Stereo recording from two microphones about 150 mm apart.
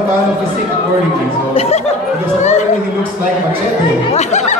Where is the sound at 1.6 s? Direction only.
45° left (ahead or behind).